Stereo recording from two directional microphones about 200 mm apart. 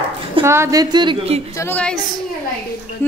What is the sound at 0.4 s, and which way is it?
A woman's voice, 15° right (ahead or behind).